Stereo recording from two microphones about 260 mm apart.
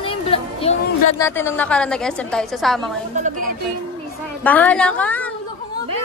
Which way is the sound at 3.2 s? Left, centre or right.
Right.